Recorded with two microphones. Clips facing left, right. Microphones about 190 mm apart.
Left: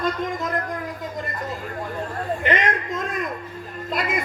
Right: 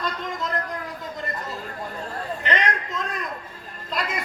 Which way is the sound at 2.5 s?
50° left (ahead or behind).